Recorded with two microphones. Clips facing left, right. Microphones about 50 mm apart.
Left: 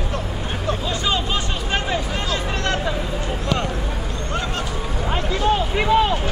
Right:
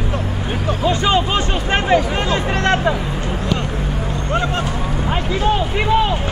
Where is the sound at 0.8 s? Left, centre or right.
Right.